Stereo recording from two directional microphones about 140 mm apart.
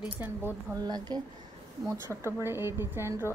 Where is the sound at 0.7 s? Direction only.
30° right (ahead or behind).